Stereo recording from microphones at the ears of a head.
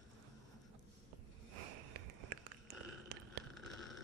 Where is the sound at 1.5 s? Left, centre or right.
Right.